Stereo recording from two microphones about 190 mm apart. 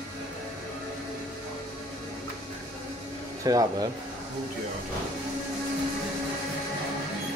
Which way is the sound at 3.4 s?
20° right (ahead or behind).